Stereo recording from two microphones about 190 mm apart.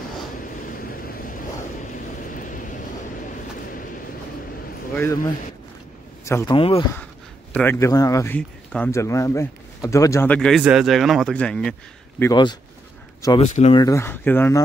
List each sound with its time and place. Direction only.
0.4 s vehicle: 50° left (ahead or behind)
4.9 s speech: 15° left (ahead or behind)
6.2 s a man's voice: 15° left (ahead or behind)
6.5 s speech: 30° left (ahead or behind)
7.5 s speech: 15° left (ahead or behind)
12.2 s speech: 20° left (ahead or behind)
13.4 s speech: 35° left (ahead or behind)
13.7 s speech: 15° left (ahead or behind)